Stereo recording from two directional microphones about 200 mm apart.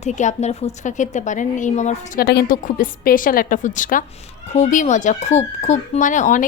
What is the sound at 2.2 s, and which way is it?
A woman's voice, 50° left (ahead or behind).